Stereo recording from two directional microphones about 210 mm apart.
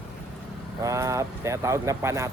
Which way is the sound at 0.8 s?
15° right (ahead or behind).